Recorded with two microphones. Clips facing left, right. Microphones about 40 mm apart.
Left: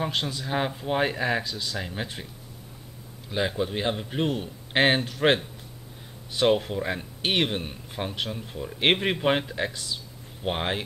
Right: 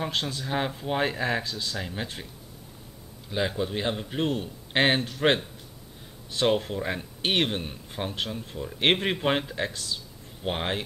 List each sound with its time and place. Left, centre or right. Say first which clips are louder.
0.1 s a man's voice: left 1 dB; centre
0.5 s speech: left 2 dB; centre
3.3 s a man's voice: left 1 dB; centre
6.3 s speech: left 2 dB; centre